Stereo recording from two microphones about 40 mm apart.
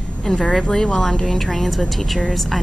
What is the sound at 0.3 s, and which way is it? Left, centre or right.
Speech, centre.